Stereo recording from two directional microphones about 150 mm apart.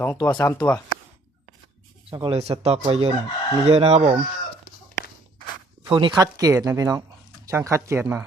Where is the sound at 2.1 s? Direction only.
35° right (ahead or behind).